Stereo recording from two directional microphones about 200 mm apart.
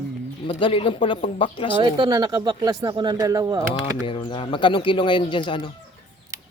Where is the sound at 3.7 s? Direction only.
25° left (ahead or behind).